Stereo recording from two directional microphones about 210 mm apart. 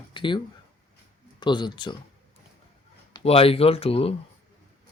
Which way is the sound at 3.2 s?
25° left (ahead or behind).